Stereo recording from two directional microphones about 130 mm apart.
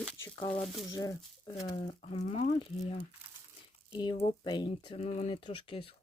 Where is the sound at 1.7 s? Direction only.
55° left (ahead or behind); by 4.9 s 35° left (ahead or behind).